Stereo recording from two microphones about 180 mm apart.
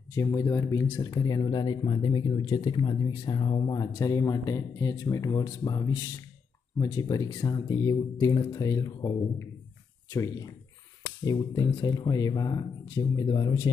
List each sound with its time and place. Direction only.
0.1 s speech: 20° left (ahead or behind)